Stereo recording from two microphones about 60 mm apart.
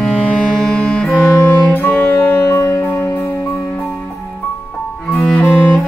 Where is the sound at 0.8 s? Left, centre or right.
Centre.